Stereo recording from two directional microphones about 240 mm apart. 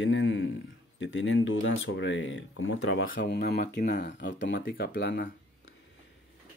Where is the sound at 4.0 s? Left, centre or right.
Left.